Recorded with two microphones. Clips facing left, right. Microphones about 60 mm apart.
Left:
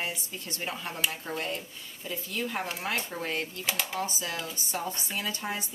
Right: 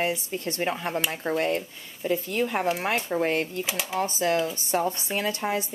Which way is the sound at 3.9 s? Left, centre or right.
Right.